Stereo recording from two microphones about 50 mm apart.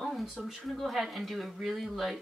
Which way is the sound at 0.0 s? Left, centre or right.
Centre.